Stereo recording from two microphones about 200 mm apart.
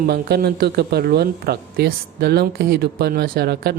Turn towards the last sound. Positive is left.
turn(degrees=-50)  # may be behind; listen again after turning